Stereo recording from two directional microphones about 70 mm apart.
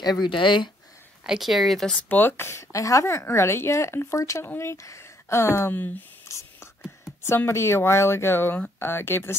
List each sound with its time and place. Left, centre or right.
0.0 s speech: left
1.2 s speech: centre
1.9 s a woman's voice: left
5.8 s speech: left
6.2 s whispering: left
7.2 s a woman's voice: left